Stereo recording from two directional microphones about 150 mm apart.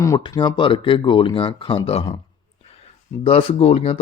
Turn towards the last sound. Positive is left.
turn(degrees=45)  # may be behind; listen again after turning